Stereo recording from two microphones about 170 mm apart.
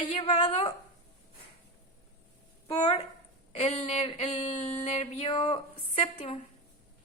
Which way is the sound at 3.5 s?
40° left (ahead or behind).